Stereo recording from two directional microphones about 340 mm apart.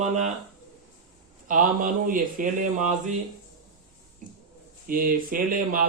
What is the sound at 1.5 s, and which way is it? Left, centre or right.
Speech, right.